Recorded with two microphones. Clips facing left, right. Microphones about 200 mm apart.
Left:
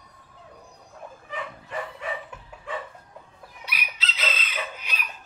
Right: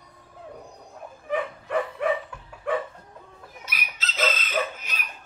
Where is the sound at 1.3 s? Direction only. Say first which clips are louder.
Right 9 dB; 60° right (ahead or behind).